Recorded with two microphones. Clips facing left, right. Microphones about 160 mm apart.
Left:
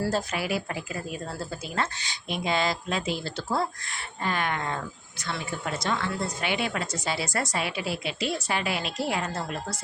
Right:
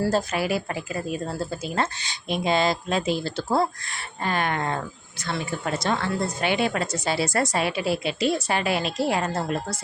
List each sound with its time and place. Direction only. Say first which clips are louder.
0.1 s a woman's voice: right 4 dB; 35° right (ahead or behind)
4.2 s a woman's voice: right 3 dB; 40° right (ahead or behind)
5.8 s a woman's voice: right 3 dB; 40° right (ahead or behind)